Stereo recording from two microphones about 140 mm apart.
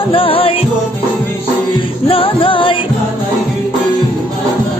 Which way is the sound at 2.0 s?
40° left (ahead or behind).